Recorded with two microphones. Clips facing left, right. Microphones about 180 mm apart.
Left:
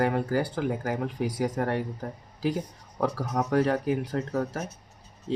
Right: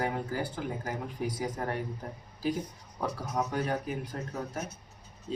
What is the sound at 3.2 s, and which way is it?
Speech, 80° left.